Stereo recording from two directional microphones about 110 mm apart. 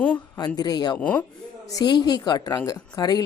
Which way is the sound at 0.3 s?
35° left (ahead or behind).